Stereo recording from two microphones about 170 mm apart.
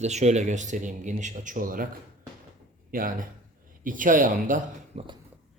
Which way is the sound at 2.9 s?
55° right (ahead or behind).